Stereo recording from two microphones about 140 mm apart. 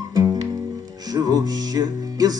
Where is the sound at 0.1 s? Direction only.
25° right (ahead or behind).